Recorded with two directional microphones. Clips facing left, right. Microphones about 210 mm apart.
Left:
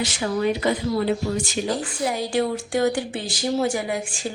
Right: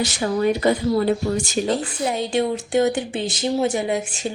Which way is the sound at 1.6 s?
25° right (ahead or behind).